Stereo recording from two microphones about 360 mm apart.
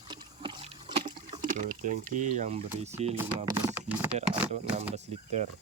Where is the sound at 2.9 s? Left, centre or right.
Centre.